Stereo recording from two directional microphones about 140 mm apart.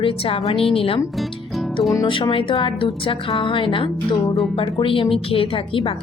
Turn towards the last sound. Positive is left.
turn(degrees=40)  # may be behind; listen again after turning